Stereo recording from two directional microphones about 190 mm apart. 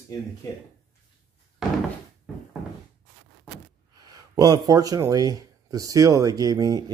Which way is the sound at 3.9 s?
20° right (ahead or behind).